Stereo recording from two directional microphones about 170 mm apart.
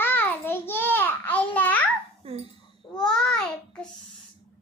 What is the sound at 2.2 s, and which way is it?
Dog, 35° right (ahead or behind).